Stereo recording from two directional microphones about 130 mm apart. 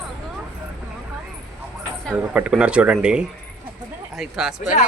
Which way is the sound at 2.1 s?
10° right (ahead or behind).